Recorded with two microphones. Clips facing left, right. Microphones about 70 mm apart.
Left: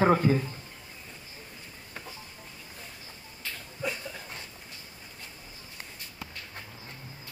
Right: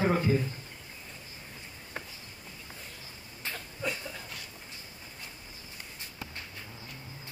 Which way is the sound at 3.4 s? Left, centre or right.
Right.